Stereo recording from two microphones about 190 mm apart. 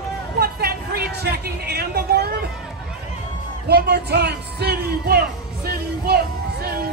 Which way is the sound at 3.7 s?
60° right (ahead or behind).